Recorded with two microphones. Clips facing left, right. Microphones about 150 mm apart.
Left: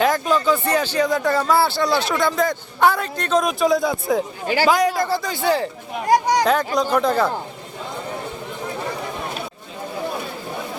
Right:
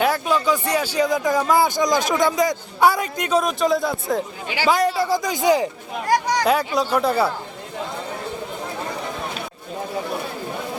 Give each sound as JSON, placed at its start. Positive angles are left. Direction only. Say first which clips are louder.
{"t": 0.0, "sound": "speech", "louder": "left 1 dB", "side_deg": -10}
{"t": 3.4, "sound": "speech", "louder": "left 2 dB", "side_deg": 0}
{"t": 4.4, "sound": "speech", "louder": "left 5 dB", "side_deg": 45}
{"t": 4.7, "sound": "speech", "louder": "right 1 dB", "side_deg": 0}
{"t": 5.0, "sound": "speech", "louder": "right 2 dB", "side_deg": -15}